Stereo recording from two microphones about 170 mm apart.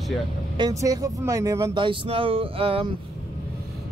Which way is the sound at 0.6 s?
20° right (ahead or behind).